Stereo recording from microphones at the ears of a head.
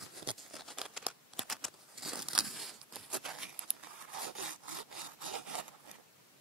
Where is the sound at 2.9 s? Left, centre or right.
Right.